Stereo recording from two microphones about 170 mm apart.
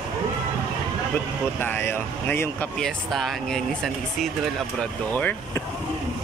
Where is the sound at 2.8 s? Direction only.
Centre (ahead or behind).